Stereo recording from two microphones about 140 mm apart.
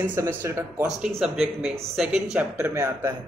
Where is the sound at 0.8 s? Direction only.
5° right (ahead or behind).